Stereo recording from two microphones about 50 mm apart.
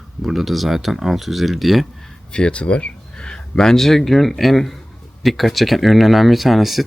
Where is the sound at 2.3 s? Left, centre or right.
Left.